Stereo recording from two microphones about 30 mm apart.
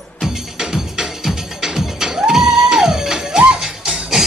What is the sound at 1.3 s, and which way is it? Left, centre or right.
Music, centre.